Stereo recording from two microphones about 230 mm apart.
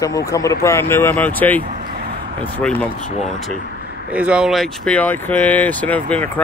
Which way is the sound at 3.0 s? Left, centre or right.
Left.